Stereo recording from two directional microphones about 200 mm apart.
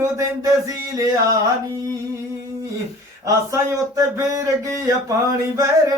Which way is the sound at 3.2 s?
15° right (ahead or behind).